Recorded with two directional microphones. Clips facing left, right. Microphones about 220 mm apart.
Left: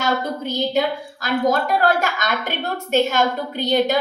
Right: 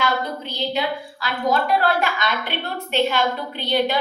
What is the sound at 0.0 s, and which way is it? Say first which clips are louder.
A woman's voice: left 2 dB; 45° left (ahead or behind).